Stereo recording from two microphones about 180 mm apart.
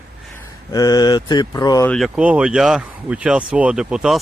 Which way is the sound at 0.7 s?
20° left (ahead or behind).